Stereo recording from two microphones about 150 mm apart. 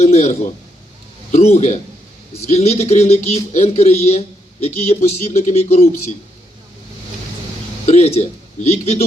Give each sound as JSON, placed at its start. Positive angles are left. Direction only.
{"t": 0.0, "sound": "speech", "side_deg": 45}
{"t": 7.9, "sound": "speech", "side_deg": 45}